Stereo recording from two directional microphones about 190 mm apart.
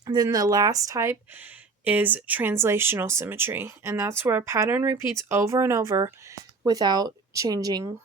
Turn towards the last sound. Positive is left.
turn(degrees=-20)  # may be behind; listen again after turning